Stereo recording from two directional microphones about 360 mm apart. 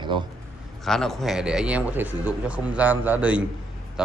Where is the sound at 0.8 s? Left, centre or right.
Centre.